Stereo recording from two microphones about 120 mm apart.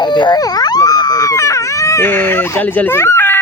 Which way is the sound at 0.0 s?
35° left (ahead or behind).